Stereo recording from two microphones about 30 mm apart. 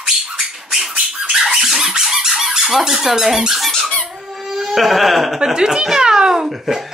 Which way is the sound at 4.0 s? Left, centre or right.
Centre.